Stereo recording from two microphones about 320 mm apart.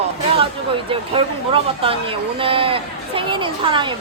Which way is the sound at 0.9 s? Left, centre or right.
Centre.